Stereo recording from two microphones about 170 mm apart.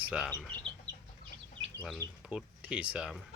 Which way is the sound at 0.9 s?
25° right (ahead or behind).